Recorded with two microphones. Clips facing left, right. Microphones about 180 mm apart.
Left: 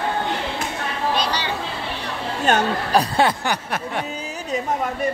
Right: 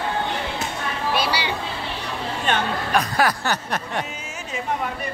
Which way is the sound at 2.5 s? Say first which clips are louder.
Left 4 dB; 40° left (ahead or behind).